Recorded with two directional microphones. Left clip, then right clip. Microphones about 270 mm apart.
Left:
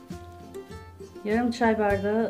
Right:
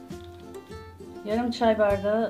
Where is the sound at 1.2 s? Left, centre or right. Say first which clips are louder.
Right 1 dB; left.